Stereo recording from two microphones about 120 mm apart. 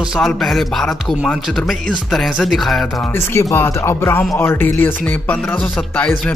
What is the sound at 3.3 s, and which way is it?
Music, 20° left (ahead or behind).